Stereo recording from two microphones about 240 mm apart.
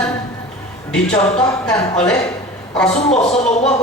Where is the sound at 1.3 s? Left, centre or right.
Centre.